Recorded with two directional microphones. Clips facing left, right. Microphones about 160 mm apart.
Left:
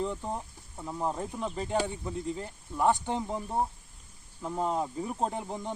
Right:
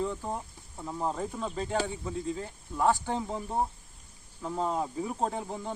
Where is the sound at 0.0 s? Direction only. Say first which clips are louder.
Even; 15° left (ahead or behind).